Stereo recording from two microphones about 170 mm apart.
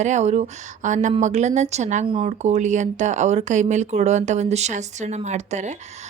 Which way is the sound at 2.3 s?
45° right (ahead or behind).